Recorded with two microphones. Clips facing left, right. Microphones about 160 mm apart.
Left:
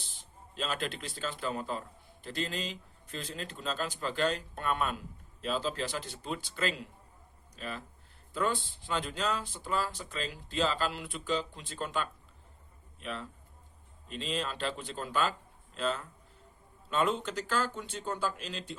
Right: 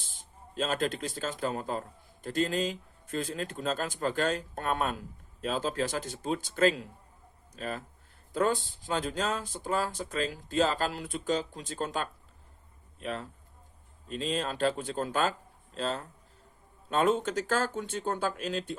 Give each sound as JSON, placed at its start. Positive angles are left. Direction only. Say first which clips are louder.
{"t": 0.0, "sound": "a man's voice", "louder": "right 1 dB", "side_deg": -45}